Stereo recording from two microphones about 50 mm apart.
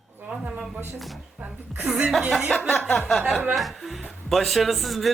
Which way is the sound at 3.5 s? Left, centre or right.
Centre.